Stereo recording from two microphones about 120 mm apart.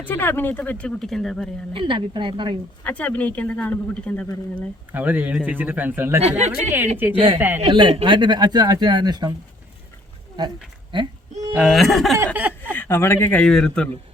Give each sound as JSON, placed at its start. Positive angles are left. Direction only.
{"t": 0.0, "sound": "speech", "side_deg": 15}
{"t": 1.7, "sound": "speech", "side_deg": -45}
{"t": 2.8, "sound": "speech", "side_deg": 10}
{"t": 4.9, "sound": "a man's voice", "side_deg": -15}
{"t": 6.2, "sound": "speech", "side_deg": -65}
{"t": 6.7, "sound": "a man's voice", "side_deg": -15}
{"t": 7.6, "sound": "speech", "side_deg": -40}
{"t": 11.5, "sound": "a sound", "side_deg": -5}
{"t": 12.1, "sound": "a man's voice", "side_deg": -20}
{"t": 12.7, "sound": "speech", "side_deg": 15}